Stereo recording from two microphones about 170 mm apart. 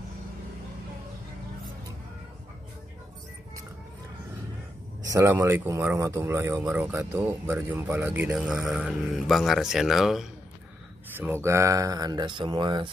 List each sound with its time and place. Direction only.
5.0 s speech: 15° right (ahead or behind); by 10.2 s centre (ahead or behind)
11.1 s speech: 15° right (ahead or behind)